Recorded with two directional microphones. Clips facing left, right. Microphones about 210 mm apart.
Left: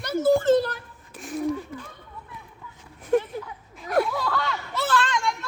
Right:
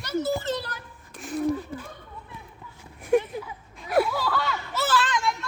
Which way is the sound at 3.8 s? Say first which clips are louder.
Even; 5° right (ahead or behind).